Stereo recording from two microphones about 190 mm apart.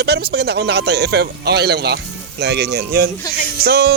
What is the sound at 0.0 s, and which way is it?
Speech, 60° right (ahead or behind).